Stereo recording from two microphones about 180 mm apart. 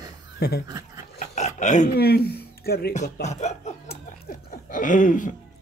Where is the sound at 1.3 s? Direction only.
40° left (ahead or behind).